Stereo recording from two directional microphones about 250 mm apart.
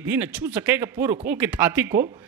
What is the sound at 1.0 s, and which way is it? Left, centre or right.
Speech, right.